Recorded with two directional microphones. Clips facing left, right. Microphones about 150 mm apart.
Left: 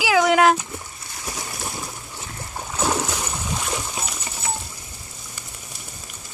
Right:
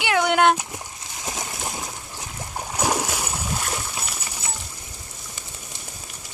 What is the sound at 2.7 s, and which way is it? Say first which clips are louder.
Splash: left 1 dB; 15° right (ahead or behind).